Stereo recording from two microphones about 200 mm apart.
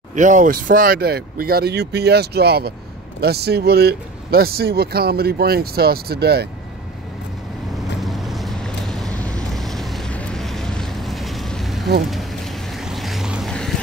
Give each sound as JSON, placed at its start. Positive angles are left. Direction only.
{"t": 0.1, "sound": "speech", "side_deg": -40}
{"t": 8.0, "sound": "vehicle", "side_deg": 0}
{"t": 12.1, "sound": "boat", "side_deg": 0}